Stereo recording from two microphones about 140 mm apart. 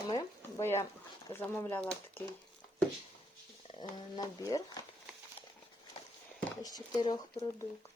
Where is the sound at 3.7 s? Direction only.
25° left (ahead or behind).